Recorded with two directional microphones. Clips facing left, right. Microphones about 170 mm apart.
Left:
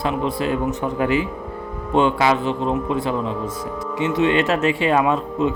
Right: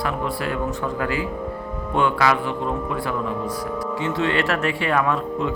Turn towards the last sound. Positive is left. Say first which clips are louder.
# left 3 dB
turn(degrees=20)  # may be behind; listen again after turning